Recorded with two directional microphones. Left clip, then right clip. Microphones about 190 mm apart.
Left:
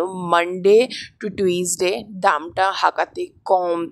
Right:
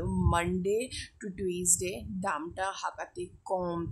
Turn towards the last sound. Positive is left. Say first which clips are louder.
# left 13 dB
turn(degrees=20)  # may be behind; listen again after turning